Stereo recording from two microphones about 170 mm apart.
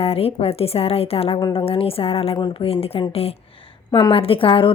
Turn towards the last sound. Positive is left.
turn(degrees=30)  # may be behind; listen again after turning